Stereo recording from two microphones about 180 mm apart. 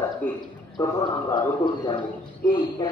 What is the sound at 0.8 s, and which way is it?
A man's voice, 25° left (ahead or behind).